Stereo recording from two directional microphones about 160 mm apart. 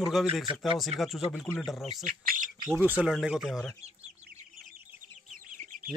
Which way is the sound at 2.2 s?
65° right (ahead or behind).